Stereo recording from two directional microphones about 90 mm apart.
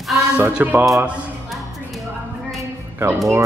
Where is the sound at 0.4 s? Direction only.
15° right (ahead or behind).